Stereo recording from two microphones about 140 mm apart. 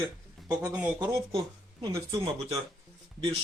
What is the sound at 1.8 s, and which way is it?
Speech, 20° right (ahead or behind).